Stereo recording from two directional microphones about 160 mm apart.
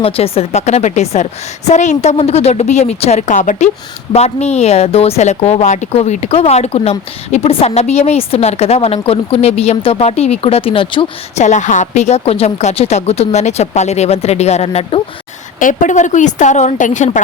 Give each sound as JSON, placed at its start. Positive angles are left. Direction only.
{"t": 0.0, "sound": "a woman's voice", "side_deg": 40}
{"t": 11.4, "sound": "a woman's voice", "side_deg": 50}
{"t": 15.5, "sound": "a woman's voice", "side_deg": 55}